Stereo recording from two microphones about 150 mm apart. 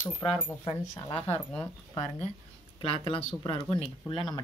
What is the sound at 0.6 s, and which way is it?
Speech, 40° left (ahead or behind).